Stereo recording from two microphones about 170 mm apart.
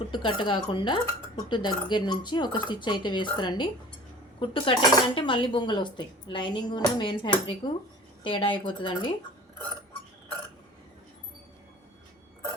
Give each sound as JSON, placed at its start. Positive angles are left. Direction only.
{"t": 0.1, "sound": "cutlery", "side_deg": 25}